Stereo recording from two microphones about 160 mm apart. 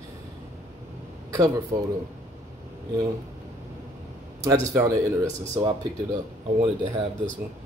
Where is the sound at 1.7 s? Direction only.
20° right (ahead or behind).